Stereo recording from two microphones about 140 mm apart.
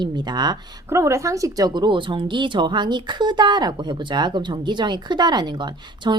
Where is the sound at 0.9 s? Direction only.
20° right (ahead or behind).